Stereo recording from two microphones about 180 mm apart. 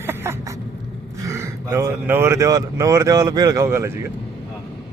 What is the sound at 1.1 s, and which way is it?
Speech, 15° right (ahead or behind).